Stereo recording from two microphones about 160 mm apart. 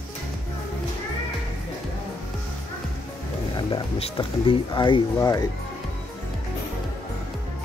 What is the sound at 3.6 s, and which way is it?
Speech, 35° left (ahead or behind).